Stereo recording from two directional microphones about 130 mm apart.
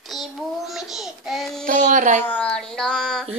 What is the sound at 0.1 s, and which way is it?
Child singing, centre (ahead or behind).